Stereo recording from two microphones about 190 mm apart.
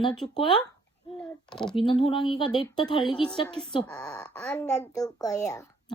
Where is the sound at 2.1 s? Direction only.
25° left (ahead or behind).